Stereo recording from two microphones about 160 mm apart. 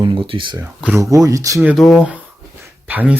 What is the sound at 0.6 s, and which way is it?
Speech, 15° right (ahead or behind).